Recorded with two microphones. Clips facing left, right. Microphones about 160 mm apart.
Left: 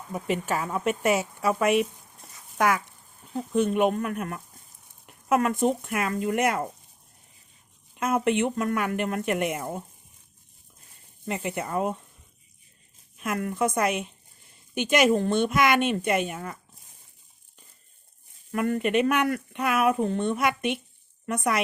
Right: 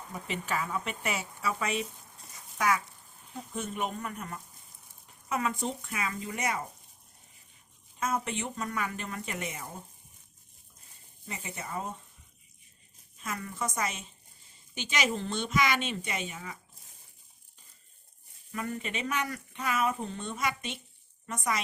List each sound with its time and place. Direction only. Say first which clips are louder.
0.1 s speech: left 7 dB; 45° left (ahead or behind)
3.3 s speech: left 13 dB; 70° left (ahead or behind)
7.9 s speech: left 9 dB; 60° left (ahead or behind)
11.3 s speech: left 10 dB; 65° left (ahead or behind)
13.1 s speech: left 9 dB; 65° left (ahead or behind)
18.5 s speech: left 12 dB; 60° left (ahead or behind)